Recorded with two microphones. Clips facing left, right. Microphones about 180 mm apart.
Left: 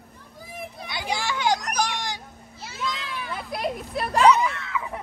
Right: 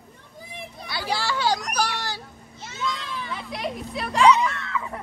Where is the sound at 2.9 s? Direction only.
Centre (ahead or behind).